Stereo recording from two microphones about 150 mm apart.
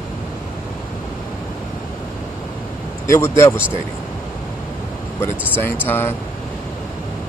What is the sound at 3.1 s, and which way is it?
Speech, 20° left (ahead or behind).